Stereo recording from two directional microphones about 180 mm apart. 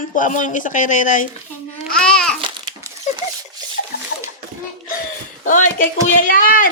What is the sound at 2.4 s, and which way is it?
Crumpling, 25° right (ahead or behind).